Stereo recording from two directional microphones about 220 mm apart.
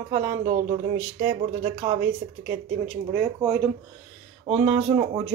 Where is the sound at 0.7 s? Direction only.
10° right (ahead or behind).